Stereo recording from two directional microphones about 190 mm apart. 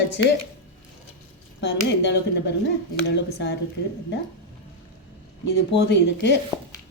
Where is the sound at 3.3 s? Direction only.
60° left (ahead or behind).